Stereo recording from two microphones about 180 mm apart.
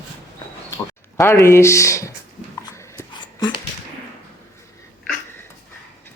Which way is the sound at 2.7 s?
15° left (ahead or behind).